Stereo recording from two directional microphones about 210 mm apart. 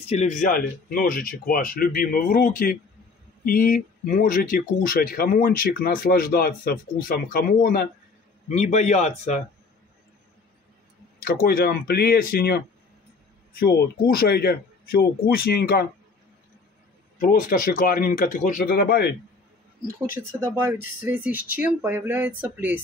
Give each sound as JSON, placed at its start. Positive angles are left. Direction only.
{"t": 0.1, "sound": "speech", "side_deg": 35}
{"t": 8.5, "sound": "speech", "side_deg": 35}
{"t": 11.1, "sound": "speech", "side_deg": 45}
{"t": 17.2, "sound": "speech", "side_deg": 40}
{"t": 20.2, "sound": "speech", "side_deg": -10}